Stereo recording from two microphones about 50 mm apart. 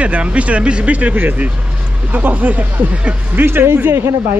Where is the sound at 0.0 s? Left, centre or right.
Right.